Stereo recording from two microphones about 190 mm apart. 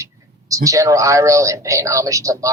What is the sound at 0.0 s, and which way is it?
Speech, 15° right (ahead or behind).